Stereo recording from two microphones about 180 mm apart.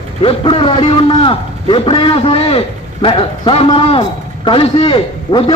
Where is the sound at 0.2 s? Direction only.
30° left (ahead or behind).